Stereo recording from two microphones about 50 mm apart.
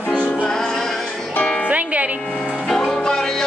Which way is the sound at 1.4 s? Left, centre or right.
Left.